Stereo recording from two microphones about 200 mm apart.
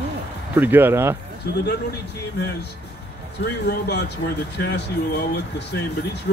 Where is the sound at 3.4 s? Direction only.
55° left (ahead or behind).